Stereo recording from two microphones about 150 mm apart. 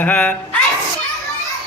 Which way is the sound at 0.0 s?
10° left (ahead or behind).